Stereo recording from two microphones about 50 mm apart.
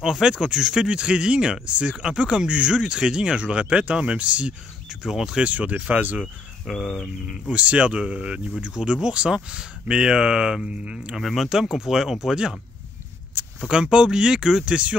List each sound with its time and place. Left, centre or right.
0.0 s speech: centre
5.4 s speech: right
6.2 s speech: centre
7.2 s speech: right
11.1 s speech: centre
13.7 s speech: centre